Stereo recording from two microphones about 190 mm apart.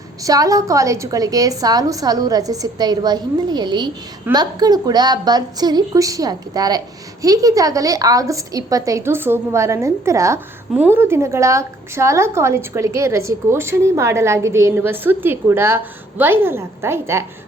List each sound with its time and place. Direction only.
0.2 s a woman's voice: 20° right (ahead or behind)